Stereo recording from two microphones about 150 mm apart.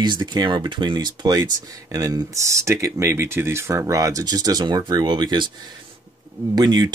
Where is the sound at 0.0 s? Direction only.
30° right (ahead or behind).